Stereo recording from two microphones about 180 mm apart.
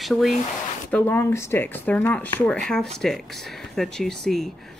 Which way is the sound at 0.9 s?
10° left (ahead or behind).